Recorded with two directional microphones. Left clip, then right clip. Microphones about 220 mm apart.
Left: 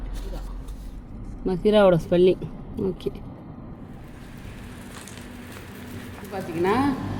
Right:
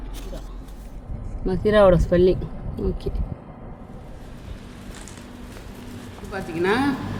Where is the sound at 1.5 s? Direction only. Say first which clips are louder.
Right 2 dB; 15° left (ahead or behind).